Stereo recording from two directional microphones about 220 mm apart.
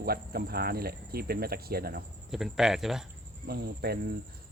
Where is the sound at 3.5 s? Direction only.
45° right (ahead or behind).